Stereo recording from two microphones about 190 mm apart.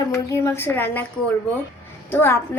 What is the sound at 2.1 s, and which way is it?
Speech, 10° left (ahead or behind).